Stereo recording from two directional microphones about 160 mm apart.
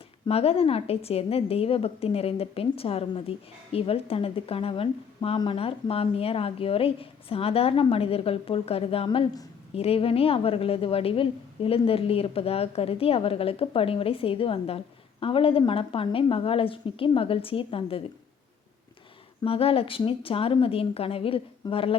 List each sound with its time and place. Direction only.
0.3 s a woman's voice: 40° left (ahead or behind)
19.5 s a woman's voice: 35° left (ahead or behind)